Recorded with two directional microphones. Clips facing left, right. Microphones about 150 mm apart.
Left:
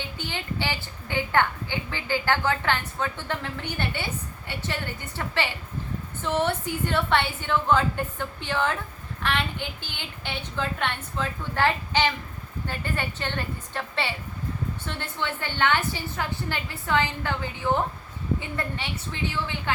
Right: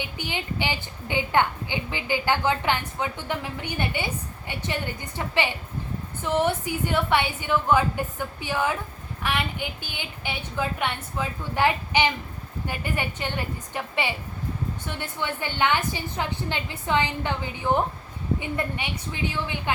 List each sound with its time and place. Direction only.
0.0 s a woman's voice: 15° right (ahead or behind)